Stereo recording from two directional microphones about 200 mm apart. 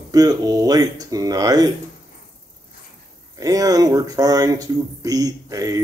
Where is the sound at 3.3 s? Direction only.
20° right (ahead or behind).